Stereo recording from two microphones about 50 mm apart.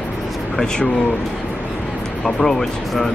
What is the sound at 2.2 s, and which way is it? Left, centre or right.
Speech, centre.